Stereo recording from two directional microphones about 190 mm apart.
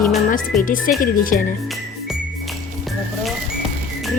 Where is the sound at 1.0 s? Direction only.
45° left (ahead or behind).